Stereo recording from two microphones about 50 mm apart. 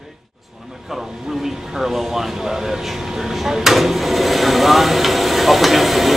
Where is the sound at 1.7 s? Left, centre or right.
Centre.